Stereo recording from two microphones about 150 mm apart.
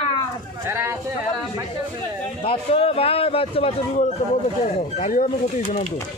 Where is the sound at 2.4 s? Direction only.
40° left (ahead or behind); by 5.9 s 55° left (ahead or behind).